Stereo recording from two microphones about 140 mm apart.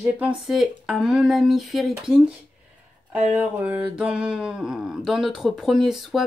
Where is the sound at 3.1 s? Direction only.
15° right (ahead or behind).